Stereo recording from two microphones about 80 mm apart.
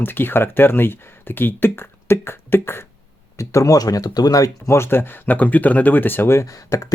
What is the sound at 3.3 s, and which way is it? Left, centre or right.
Speech, left.